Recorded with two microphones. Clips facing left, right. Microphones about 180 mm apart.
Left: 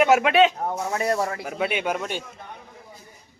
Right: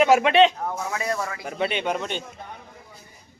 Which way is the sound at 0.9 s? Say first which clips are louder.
Left 4 dB; 35° left (ahead or behind).